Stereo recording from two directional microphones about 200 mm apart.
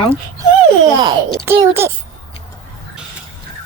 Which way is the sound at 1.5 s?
10° right (ahead or behind).